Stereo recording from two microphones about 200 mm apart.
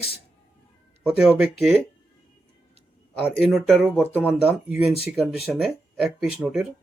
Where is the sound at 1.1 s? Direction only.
5° right (ahead or behind).